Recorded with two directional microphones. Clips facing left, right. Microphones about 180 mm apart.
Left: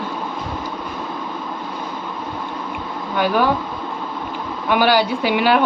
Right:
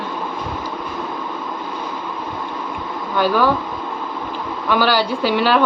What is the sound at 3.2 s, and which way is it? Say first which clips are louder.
Speech: right 1 dB; 15° left (ahead or behind).